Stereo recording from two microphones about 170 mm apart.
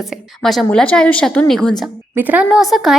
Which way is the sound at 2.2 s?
10° right (ahead or behind).